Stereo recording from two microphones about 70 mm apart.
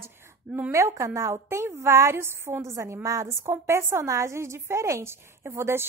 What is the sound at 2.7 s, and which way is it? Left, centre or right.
A woman's voice, right.